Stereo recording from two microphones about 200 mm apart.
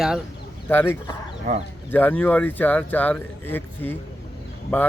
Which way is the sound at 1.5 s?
40° right (ahead or behind).